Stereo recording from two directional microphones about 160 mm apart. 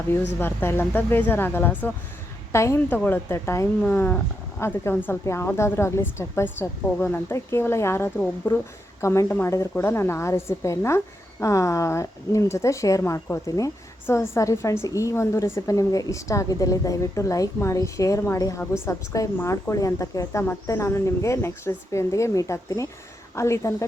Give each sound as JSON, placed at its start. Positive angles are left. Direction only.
{"t": 0.3, "sound": "a woman's voice", "side_deg": 15}